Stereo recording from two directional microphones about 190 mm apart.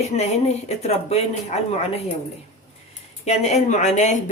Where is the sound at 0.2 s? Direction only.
35° left (ahead or behind).